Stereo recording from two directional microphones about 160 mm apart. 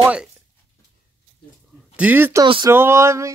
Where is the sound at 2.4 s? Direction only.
30° right (ahead or behind).